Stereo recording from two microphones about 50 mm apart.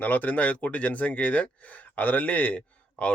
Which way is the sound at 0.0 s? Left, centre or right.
Left.